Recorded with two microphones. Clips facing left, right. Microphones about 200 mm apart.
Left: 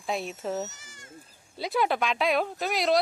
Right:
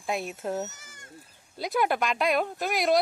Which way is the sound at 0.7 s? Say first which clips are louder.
Even; 55° right (ahead or behind).